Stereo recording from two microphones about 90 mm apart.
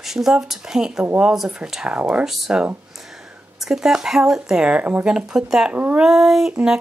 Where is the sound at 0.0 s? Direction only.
5° right (ahead or behind).